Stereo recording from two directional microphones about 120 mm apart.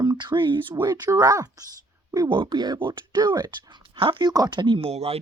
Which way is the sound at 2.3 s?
40° right (ahead or behind).